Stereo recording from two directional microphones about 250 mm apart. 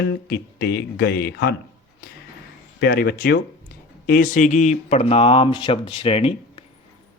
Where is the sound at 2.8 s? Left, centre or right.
Left.